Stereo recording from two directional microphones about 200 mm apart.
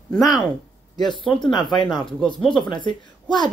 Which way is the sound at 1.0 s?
25° left (ahead or behind).